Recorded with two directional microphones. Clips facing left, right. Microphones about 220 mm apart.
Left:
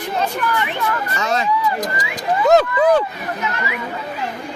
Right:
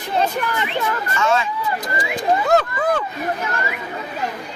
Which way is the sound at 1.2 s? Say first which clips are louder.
Even; 40° left (ahead or behind).